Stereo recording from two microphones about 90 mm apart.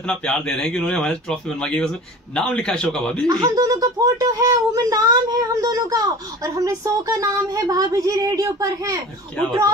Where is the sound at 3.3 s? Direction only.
50° right (ahead or behind).